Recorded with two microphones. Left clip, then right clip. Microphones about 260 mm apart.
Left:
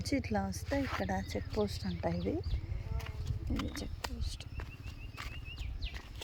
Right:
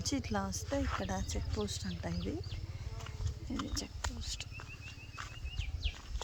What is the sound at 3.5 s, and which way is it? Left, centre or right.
Speech, left.